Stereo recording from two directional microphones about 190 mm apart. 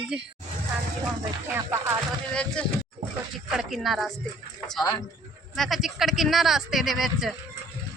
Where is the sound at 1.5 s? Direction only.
15° right (ahead or behind).